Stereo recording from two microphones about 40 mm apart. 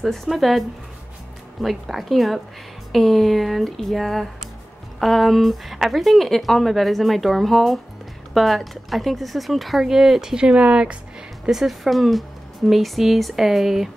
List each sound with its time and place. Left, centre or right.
0.0 s speech: centre
10.5 s speech: right
11.4 s speech: centre